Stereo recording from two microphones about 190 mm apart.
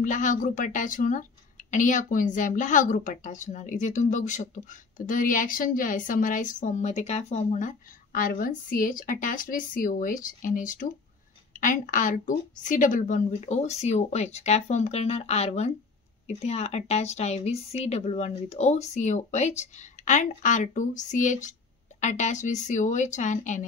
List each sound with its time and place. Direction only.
0.0 s a woman's voice: 40° left (ahead or behind)